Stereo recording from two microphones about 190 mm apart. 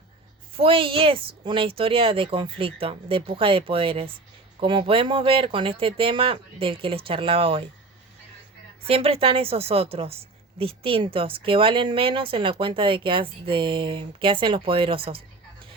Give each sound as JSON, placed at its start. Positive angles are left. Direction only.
{"t": 0.5, "sound": "a woman's voice", "side_deg": -30}
{"t": 8.9, "sound": "a woman's voice", "side_deg": -30}